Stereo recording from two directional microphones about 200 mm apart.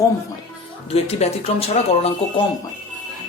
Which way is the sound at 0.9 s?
30° left (ahead or behind).